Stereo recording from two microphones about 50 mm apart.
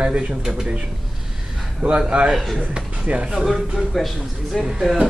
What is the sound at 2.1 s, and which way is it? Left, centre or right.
A man's voice, right.